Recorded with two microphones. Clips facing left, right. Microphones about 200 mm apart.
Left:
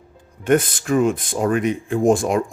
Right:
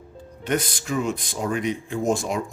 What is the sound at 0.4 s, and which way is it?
Speech, 50° left (ahead or behind).